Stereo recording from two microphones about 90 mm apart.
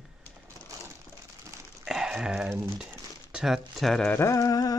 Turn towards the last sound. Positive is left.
turn(degrees=40)  # may be behind; listen again after turning